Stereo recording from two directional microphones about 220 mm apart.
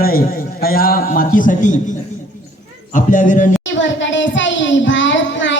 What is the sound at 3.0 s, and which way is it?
Speech, 35° left (ahead or behind).